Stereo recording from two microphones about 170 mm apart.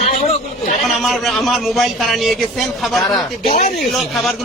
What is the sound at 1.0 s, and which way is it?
Speech, centre (ahead or behind).